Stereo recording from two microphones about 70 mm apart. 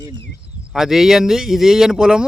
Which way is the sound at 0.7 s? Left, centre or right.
Centre.